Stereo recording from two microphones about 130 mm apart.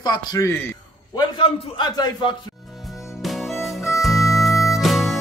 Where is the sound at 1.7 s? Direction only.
35° left (ahead or behind).